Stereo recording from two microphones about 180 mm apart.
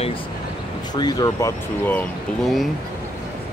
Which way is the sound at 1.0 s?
20° left (ahead or behind).